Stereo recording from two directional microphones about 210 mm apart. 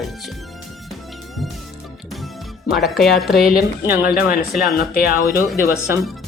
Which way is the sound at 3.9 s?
45° left (ahead or behind).